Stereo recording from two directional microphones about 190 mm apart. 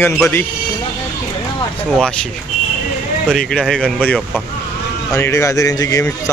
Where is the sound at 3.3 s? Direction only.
Centre (ahead or behind).